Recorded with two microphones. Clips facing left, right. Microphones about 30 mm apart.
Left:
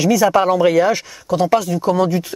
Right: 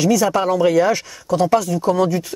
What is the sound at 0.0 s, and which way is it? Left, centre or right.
Speech, centre.